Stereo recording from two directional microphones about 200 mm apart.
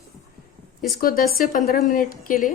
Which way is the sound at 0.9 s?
45° left (ahead or behind).